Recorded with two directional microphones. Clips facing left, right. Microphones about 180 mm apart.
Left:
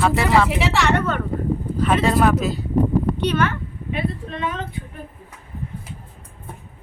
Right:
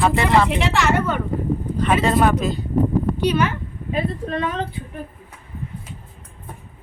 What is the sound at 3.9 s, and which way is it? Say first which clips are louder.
Speech: right 3 dB; 40° right (ahead or behind).